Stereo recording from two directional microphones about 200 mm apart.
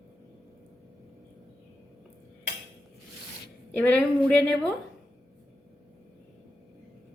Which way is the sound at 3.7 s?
5° left (ahead or behind).